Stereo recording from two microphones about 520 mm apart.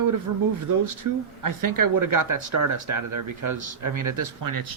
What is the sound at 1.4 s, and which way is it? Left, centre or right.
Speech, right.